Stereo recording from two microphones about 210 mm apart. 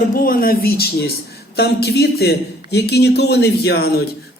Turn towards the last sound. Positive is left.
turn(degrees=50)  # may be behind; listen again after turning